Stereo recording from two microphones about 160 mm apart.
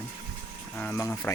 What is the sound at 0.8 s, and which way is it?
Speech, 10° left (ahead or behind).